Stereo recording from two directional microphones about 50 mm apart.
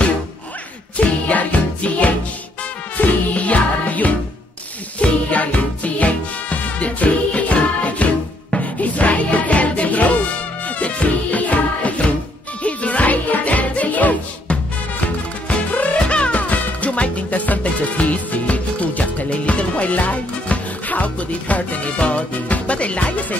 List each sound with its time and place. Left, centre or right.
0.9 s music: left